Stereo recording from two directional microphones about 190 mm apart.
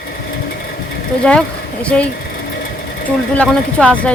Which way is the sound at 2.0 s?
50° left (ahead or behind).